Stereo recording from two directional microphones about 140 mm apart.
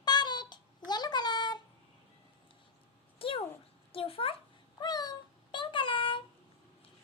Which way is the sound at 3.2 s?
40° left (ahead or behind).